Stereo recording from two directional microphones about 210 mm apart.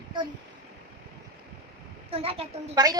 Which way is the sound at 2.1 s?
25° right (ahead or behind).